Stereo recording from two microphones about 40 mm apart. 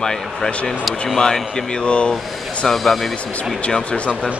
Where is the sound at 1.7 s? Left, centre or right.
Left.